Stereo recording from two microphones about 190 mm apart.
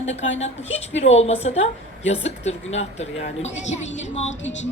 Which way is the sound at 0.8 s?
35° left (ahead or behind).